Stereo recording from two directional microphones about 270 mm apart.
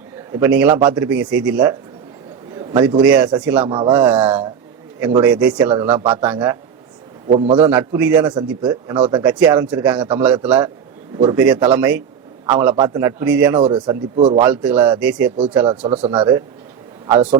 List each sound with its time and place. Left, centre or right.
0.3 s a man's voice: centre
2.6 s a man's voice: centre
3.7 s a man's voice: centre
4.3 s a man's voice: centre
6.0 s a man's voice: centre
7.7 s a man's voice: centre
14.4 s a man's voice: centre
15.6 s speech: centre